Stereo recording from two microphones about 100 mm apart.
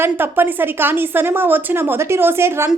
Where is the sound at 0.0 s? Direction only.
20° right (ahead or behind).